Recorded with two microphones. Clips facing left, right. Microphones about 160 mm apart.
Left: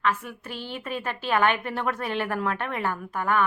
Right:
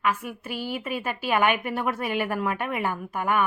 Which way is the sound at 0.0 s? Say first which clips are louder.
Even; 10° right (ahead or behind).